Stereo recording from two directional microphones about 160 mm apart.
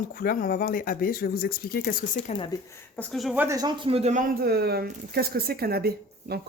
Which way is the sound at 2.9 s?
5° left (ahead or behind).